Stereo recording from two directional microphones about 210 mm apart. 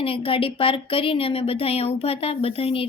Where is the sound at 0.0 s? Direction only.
25° left (ahead or behind).